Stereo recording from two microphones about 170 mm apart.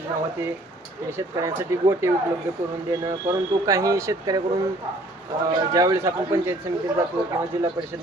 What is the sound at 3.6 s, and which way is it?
Speech, 20° right (ahead or behind).